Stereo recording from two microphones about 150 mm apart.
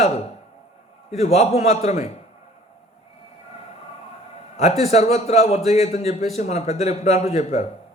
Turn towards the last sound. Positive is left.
turn(degrees=50)  # may be behind; listen again after turning